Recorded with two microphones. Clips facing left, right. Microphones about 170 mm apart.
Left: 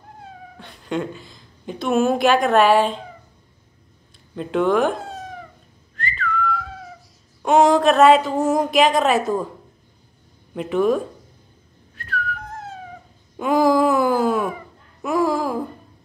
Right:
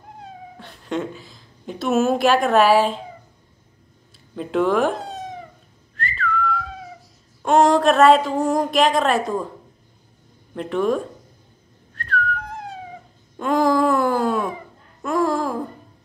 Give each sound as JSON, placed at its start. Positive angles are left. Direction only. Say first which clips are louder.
{"t": 0.6, "sound": "a woman's voice", "louder": "left 1 dB", "side_deg": 0}
{"t": 4.4, "sound": "a woman's voice", "louder": "left 1 dB", "side_deg": 0}
{"t": 5.0, "sound": "cat", "louder": "right 2 dB", "side_deg": -20}
{"t": 5.9, "sound": "whistling", "louder": "right 1 dB", "side_deg": 0}
{"t": 7.4, "sound": "a woman's voice", "louder": "left 1 dB", "side_deg": 0}
{"t": 10.5, "sound": "a woman's voice", "louder": "left 2 dB", "side_deg": 5}
{"t": 11.9, "sound": "whistling", "louder": "right 4 dB", "side_deg": 5}
{"t": 12.4, "sound": "cat", "louder": "right 1 dB", "side_deg": -15}
{"t": 13.4, "sound": "wail", "louder": "left 1 dB", "side_deg": 5}
{"t": 15.0, "sound": "a sound", "louder": "left 1 dB", "side_deg": 5}